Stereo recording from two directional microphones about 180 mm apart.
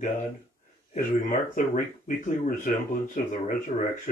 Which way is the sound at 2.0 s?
45° left (ahead or behind).